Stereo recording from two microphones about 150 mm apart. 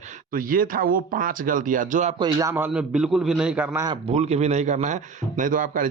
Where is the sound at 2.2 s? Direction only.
20° right (ahead or behind).